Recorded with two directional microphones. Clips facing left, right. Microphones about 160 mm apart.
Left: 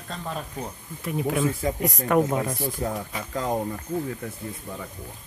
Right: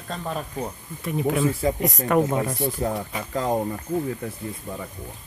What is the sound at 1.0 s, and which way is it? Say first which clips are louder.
Speech: right 2 dB; centre (ahead or behind).